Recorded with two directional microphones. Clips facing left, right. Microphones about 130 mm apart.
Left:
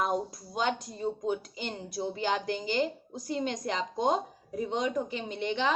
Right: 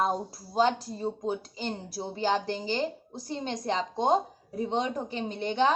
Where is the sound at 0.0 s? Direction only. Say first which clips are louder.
Right 1 dB; 30° right (ahead or behind).